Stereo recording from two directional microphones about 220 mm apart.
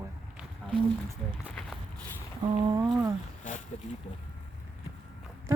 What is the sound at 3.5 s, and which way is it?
Speech, 35° left (ahead or behind).